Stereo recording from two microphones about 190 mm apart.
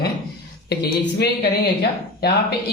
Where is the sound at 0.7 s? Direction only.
60° left (ahead or behind).